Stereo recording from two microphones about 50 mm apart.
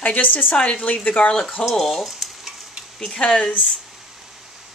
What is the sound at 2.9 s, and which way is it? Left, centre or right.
Speech, centre.